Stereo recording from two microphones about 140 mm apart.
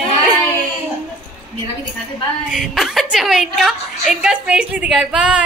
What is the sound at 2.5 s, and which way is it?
A woman's voice, 5° right (ahead or behind).